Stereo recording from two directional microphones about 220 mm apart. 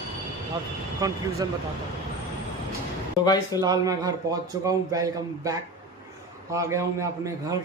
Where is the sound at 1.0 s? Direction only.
15° right (ahead or behind).